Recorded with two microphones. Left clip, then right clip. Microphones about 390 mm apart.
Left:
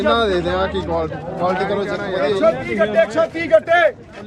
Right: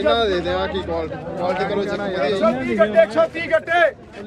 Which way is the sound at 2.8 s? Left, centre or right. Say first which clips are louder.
Right 4 dB; centre.